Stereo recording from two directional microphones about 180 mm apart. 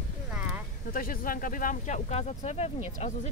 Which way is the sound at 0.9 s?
50° left (ahead or behind).